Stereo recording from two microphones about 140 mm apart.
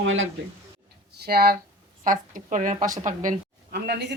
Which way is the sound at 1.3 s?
90° right.